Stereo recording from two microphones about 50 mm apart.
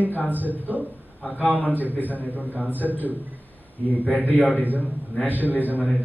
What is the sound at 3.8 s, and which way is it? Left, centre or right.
Speech, left.